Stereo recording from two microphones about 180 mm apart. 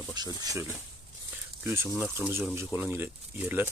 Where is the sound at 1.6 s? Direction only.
15° right (ahead or behind).